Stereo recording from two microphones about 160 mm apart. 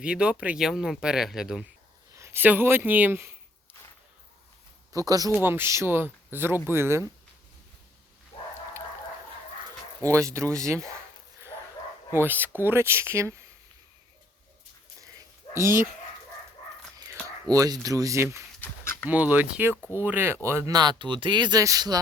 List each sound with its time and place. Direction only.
0.0 s speech: 5° right (ahead or behind)
2.1 s speech: 15° right (ahead or behind)
4.9 s speech: 20° right (ahead or behind)
8.3 s bow-wow: 35° left (ahead or behind)
10.0 s speech: 20° right (ahead or behind)
12.1 s speech: 10° right (ahead or behind)
15.5 s speech: 15° right (ahead or behind)
17.2 s speech: 20° right (ahead or behind)
18.6 s dog: 15° left (ahead or behind)
19.0 s speech: 10° right (ahead or behind)